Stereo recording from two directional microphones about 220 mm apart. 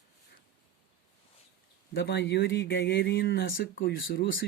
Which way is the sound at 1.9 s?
50° left (ahead or behind).